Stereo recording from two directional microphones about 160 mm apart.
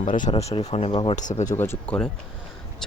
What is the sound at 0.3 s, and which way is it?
Speech, 40° left (ahead or behind).